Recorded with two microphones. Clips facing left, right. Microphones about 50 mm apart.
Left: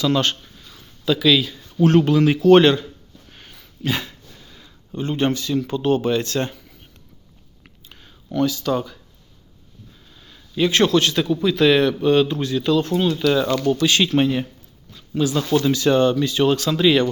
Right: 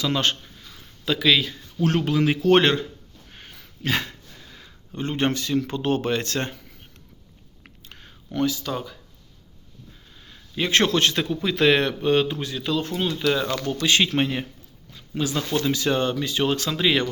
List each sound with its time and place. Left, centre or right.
0.0 s speech: centre; by 1.5 s right
1.9 s speech: centre
2.5 s speech: right
3.8 s dog: right
4.9 s speech: right
7.9 s a sound: right
8.3 s speech: right
8.6 s speech: centre
10.2 s a man's voice: right
12.0 s speech: centre
13.4 s speech: centre
13.8 s speech: right
15.6 s speech: centre